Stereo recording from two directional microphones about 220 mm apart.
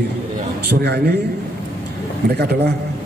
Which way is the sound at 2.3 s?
45° right (ahead or behind).